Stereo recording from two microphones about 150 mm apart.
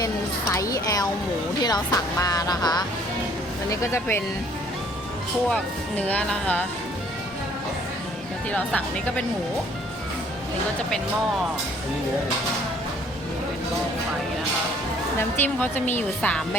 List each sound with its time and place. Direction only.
0.5 s speech: 20° left (ahead or behind)
5.5 s speech: 10° left (ahead or behind)
8.4 s speech: 10° left (ahead or behind)
15.2 s speech: 15° left (ahead or behind)